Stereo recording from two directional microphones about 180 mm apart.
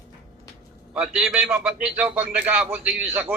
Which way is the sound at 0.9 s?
5° right (ahead or behind).